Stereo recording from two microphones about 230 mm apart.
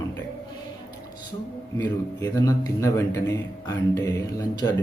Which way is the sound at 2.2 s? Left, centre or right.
Centre.